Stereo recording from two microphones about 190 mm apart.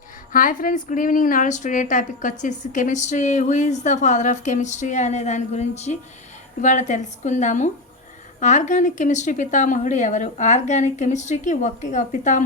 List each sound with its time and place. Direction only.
0.3 s a woman's voice: 45° left (ahead or behind)